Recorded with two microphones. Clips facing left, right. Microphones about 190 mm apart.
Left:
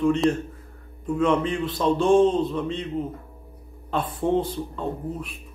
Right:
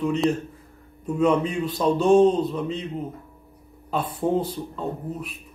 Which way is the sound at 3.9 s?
10° right (ahead or behind).